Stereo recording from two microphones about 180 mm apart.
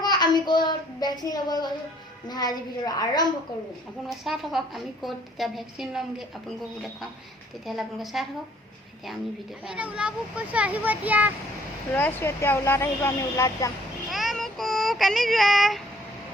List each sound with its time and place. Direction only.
0.0 s child singing: 25° left (ahead or behind)
2.2 s a woman's voice: 20° left (ahead or behind)
4.2 s a woman's voice: centre (ahead or behind)
7.6 s a woman's voice: centre (ahead or behind)
9.6 s a child's voice: 5° right (ahead or behind)
11.9 s speech: 10° left (ahead or behind)
14.1 s child singing: centre (ahead or behind)